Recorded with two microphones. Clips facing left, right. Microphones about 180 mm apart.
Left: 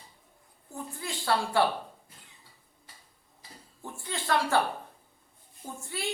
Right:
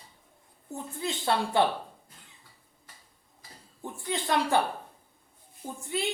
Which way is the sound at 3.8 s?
20° right (ahead or behind).